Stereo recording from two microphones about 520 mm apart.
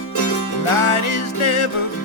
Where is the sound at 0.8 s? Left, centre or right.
Left.